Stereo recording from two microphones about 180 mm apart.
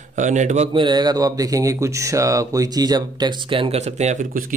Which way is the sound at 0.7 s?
25° right (ahead or behind).